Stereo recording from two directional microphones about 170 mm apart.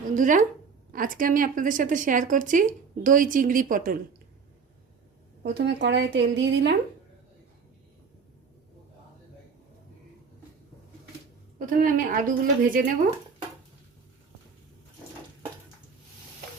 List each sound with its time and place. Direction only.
0.1 s a woman's voice: 50° right (ahead or behind)
5.4 s speech: 90° right
11.6 s a woman's voice: 50° right (ahead or behind)